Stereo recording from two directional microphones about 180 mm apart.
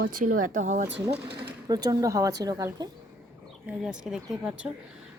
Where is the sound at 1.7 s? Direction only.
20° right (ahead or behind).